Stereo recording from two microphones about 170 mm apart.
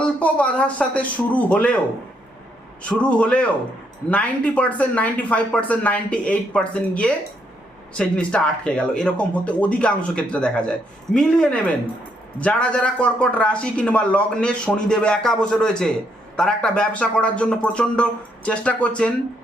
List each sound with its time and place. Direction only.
0.2 s speech: 10° left (ahead or behind)
2.8 s speech: 5° left (ahead or behind)